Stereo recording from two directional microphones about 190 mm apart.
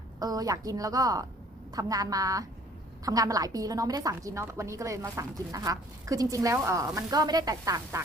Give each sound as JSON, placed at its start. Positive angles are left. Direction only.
{"t": 0.2, "sound": "a woman's voice", "side_deg": -20}